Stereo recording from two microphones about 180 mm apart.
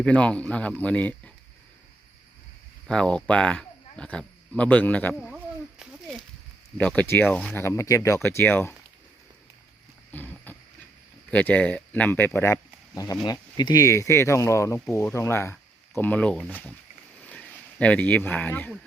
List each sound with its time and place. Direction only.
0.0 s speech: 5° left (ahead or behind)
2.8 s speech: 5° left (ahead or behind)
5.8 s a sound: centre (ahead or behind)
6.7 s speech: 5° left (ahead or behind)
10.1 s wild animals: 10° left (ahead or behind)
11.3 s speech: 10° left (ahead or behind)